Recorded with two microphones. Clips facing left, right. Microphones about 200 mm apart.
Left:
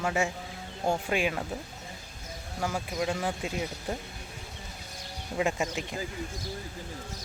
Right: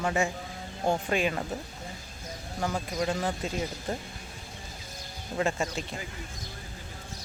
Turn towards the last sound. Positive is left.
turn(degrees=15)  # may be behind; listen again after turning